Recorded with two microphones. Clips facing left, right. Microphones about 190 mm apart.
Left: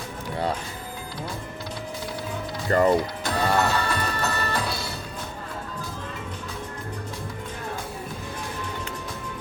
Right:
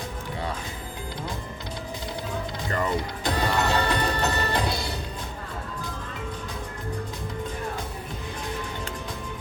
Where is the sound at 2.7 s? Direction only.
35° left (ahead or behind).